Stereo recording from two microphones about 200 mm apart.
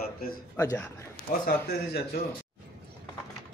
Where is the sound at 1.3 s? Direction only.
40° left (ahead or behind).